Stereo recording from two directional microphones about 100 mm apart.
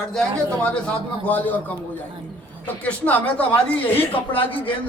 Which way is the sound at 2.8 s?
15° left (ahead or behind).